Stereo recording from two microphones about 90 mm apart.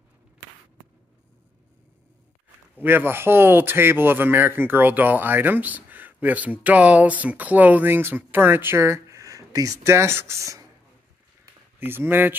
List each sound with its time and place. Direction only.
2.8 s speech: 20° right (ahead or behind)
11.8 s speech: 25° right (ahead or behind)